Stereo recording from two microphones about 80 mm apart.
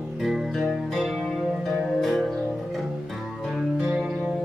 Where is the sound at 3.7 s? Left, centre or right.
Right.